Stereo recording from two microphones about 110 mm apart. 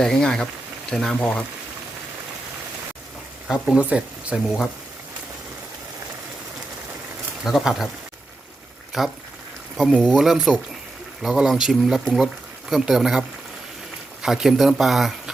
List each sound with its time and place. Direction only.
0.0 s speech: 5° left (ahead or behind)
3.5 s speech: 10° right (ahead or behind)
7.4 s speech: 5° right (ahead or behind)
8.9 s speech: centre (ahead or behind)